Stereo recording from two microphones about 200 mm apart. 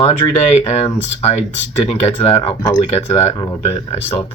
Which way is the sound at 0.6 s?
30° left (ahead or behind).